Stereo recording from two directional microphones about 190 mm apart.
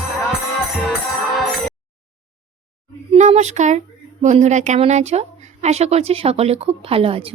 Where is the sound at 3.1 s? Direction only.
35° right (ahead or behind).